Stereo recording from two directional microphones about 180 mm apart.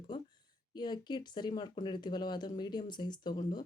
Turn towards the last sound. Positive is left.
turn(degrees=25)  # may be behind; listen again after turning